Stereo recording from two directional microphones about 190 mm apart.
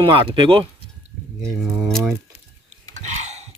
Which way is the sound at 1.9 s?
5° left (ahead or behind).